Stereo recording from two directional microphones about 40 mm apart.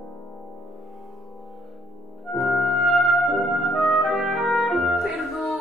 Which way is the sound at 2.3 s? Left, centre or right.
Centre.